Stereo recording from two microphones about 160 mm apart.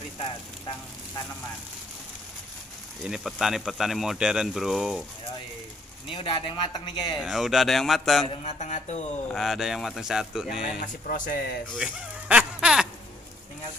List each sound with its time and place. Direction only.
0.2 s speech: 30° left (ahead or behind)
3.1 s speech: 5° right (ahead or behind)
6.0 s speech: 35° left (ahead or behind)
7.2 s speech: centre (ahead or behind)
8.3 s speech: 45° left (ahead or behind)
9.3 s speech: centre (ahead or behind)
10.6 s speech: 55° left (ahead or behind)
11.7 s a sound: 5° right (ahead or behind)